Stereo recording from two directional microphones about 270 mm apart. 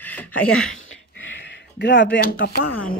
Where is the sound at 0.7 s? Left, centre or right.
Left.